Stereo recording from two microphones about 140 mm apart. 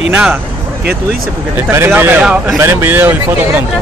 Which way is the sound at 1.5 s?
15° right (ahead or behind).